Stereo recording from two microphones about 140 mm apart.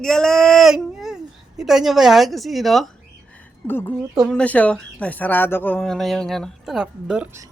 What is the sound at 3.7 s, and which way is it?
A woman's voice, 15° left (ahead or behind).